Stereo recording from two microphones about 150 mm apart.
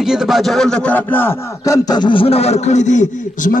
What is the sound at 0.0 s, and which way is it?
Speech, 5° right (ahead or behind).